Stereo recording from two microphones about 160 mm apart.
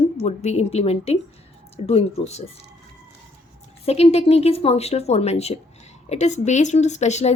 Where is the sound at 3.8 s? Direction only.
40° left (ahead or behind).